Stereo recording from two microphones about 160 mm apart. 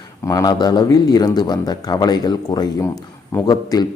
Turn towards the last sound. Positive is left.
turn(degrees=25)  # may be behind; listen again after turning